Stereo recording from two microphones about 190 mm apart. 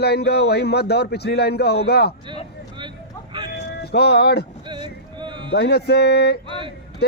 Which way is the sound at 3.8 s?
60° left (ahead or behind).